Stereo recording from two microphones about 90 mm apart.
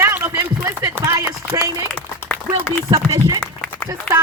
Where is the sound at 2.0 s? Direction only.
25° left (ahead or behind).